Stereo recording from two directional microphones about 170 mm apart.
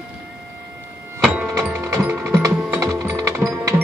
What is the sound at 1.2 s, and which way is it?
Music, 5° right (ahead or behind).